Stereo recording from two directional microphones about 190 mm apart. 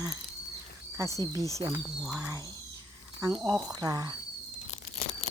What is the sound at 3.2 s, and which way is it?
Speech, 20° right (ahead or behind).